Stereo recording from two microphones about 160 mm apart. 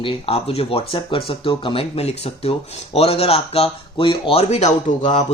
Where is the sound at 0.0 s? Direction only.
35° left (ahead or behind).